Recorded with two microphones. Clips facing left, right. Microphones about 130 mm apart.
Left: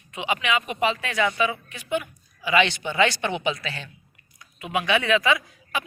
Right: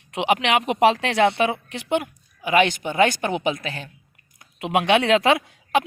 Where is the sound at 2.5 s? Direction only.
45° right (ahead or behind).